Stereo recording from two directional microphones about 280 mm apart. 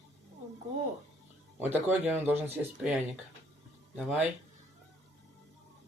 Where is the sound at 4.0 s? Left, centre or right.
Centre.